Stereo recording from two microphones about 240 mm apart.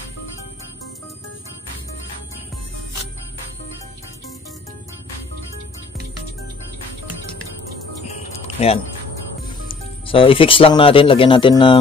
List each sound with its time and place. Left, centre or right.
8.0 s music: left
10.0 s speech: left